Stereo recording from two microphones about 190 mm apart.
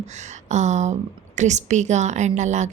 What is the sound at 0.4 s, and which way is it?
A woman's voice, 40° right (ahead or behind).